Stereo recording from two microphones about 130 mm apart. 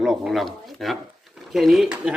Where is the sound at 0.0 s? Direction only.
Centre (ahead or behind).